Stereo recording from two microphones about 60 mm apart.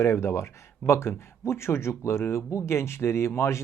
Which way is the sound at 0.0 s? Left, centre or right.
Left.